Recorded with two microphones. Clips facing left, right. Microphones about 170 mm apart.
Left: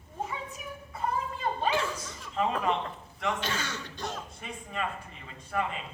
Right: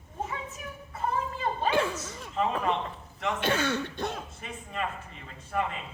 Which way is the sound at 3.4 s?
55° right (ahead or behind).